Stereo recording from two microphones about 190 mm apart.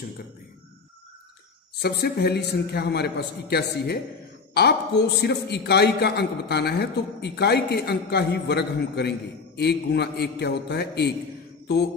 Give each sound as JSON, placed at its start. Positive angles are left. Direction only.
{"t": 1.8, "sound": "a man's voice", "side_deg": 60}